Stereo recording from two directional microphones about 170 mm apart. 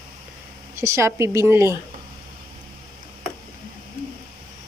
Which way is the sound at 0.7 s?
15° right (ahead or behind).